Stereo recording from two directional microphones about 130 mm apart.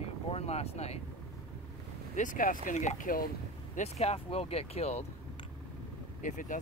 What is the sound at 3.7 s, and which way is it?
Speech, 55° left (ahead or behind).